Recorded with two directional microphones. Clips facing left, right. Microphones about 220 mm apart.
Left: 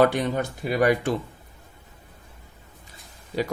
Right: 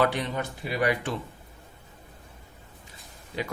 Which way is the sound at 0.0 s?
45° left (ahead or behind).